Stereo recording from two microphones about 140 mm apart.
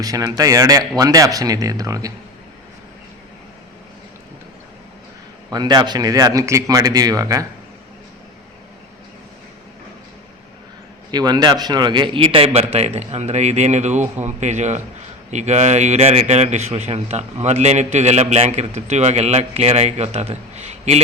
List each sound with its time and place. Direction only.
0.0 s speech: 25° right (ahead or behind)
5.5 s speech: 30° right (ahead or behind)
11.1 s a man's voice: 30° right (ahead or behind); by 21.0 s 50° right (ahead or behind)